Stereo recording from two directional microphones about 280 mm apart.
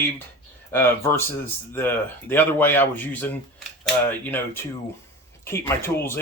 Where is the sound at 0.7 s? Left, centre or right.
Centre.